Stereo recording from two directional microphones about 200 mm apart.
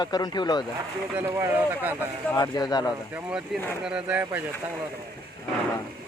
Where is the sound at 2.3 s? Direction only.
20° left (ahead or behind).